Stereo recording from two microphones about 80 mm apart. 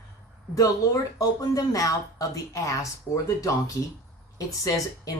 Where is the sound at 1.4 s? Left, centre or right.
Left.